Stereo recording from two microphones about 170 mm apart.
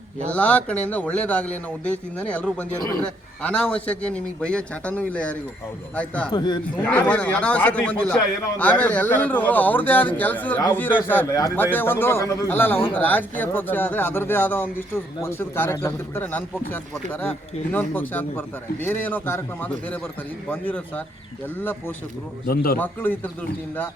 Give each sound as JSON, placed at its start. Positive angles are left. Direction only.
{"t": 0.3, "sound": "a man's voice", "side_deg": 10}
{"t": 6.3, "sound": "a man's voice", "side_deg": 25}
{"t": 6.8, "sound": "a man's voice", "side_deg": 10}
{"t": 22.4, "sound": "a man's voice", "side_deg": 60}
{"t": 22.8, "sound": "a man's voice", "side_deg": 10}